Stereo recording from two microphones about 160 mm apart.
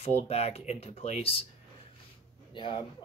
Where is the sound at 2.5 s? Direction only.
30° left (ahead or behind).